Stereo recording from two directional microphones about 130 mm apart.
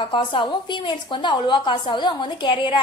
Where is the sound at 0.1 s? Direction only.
40° left (ahead or behind).